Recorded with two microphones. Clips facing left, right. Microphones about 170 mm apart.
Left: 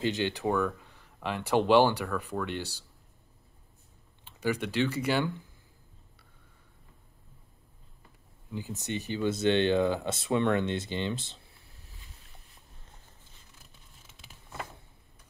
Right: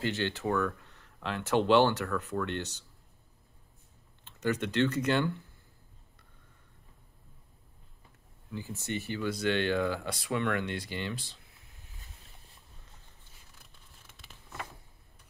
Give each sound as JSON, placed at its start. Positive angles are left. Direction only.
{"t": 0.0, "sound": "speech", "side_deg": 15}
{"t": 4.2, "sound": "speech", "side_deg": 10}
{"t": 8.5, "sound": "speech", "side_deg": 15}